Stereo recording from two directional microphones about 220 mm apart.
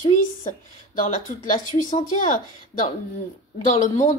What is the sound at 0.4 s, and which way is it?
A woman's voice, 35° left (ahead or behind).